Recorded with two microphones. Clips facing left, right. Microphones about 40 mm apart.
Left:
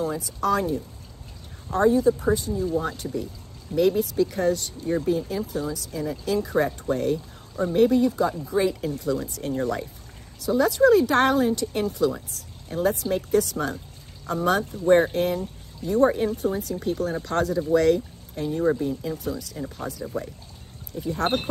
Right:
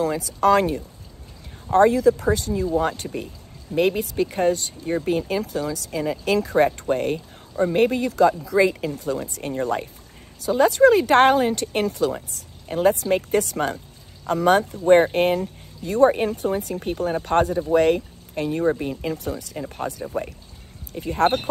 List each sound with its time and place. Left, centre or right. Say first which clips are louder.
0.0 s speech: right 6 dB; right
1.9 s speech: right 1 dB; right
3.0 s speech: even; right
5.0 s speech: right 2 dB; right
9.3 s speech: right 2 dB; right
10.4 s speech: right 3 dB; right
18.3 s speech: right 2 dB; right